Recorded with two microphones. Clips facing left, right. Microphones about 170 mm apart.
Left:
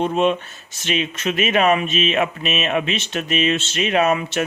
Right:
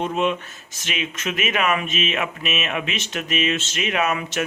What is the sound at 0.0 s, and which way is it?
Speech, 30° left (ahead or behind).